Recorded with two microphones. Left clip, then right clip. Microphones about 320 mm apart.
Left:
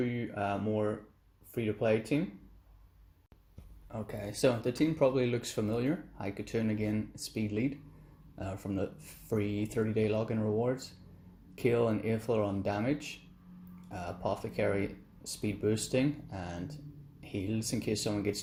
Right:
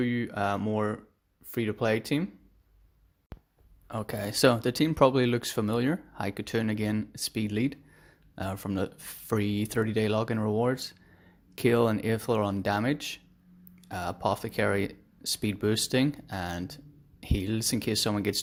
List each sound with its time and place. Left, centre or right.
0.0 s speech: right
3.8 s speech: right